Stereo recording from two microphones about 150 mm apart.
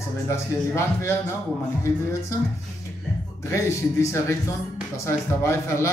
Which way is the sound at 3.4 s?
20° left (ahead or behind).